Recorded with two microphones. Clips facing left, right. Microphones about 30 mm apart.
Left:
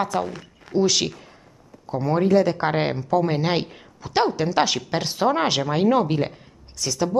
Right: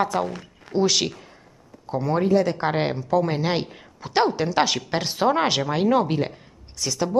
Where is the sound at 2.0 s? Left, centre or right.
Centre.